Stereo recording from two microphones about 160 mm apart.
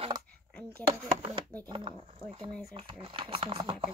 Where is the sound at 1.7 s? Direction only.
30° right (ahead or behind).